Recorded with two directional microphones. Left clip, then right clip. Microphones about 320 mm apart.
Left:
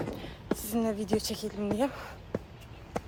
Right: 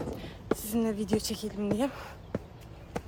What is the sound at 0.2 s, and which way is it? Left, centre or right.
A woman's voice, centre.